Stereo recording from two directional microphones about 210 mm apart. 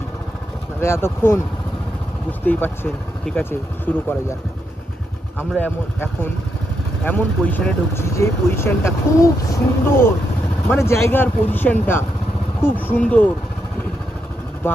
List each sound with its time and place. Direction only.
0.8 s speech: 10° left (ahead or behind)
2.4 s speech: 10° left (ahead or behind)
5.4 s speech: 10° left (ahead or behind)